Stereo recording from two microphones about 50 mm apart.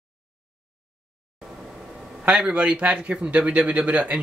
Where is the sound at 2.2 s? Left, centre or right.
Right.